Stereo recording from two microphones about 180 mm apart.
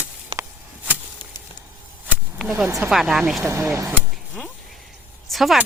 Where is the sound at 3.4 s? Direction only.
15° right (ahead or behind).